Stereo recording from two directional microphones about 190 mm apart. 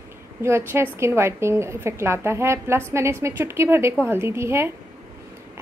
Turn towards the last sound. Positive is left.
turn(degrees=-15)  # may be behind; listen again after turning